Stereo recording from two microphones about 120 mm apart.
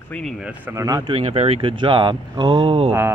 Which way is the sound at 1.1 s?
55° right (ahead or behind).